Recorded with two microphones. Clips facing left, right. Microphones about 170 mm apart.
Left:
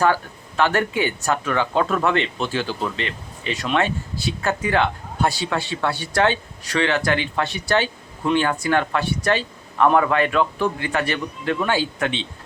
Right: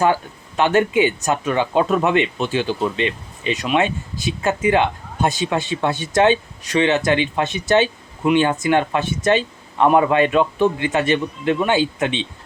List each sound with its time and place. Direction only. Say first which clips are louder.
0.0 s speech: right 2 dB; 20° right (ahead or behind)